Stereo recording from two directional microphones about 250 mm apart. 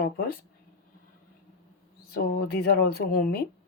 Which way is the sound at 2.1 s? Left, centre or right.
Left.